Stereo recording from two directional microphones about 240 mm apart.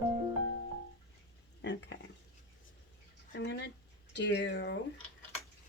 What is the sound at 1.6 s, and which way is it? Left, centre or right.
Stir, left.